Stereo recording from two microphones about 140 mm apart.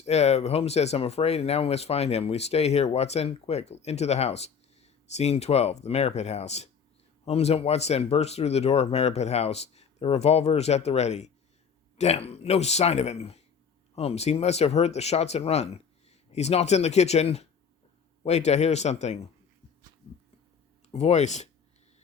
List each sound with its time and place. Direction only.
0.0 s speech: 50° left (ahead or behind)
20.9 s speech: 55° left (ahead or behind)